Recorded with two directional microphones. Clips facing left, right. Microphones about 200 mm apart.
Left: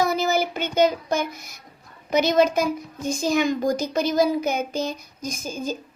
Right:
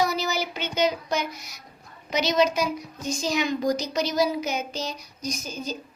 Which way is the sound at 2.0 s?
50° left (ahead or behind).